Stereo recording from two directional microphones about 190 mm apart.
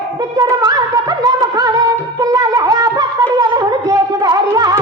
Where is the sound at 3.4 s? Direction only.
20° right (ahead or behind).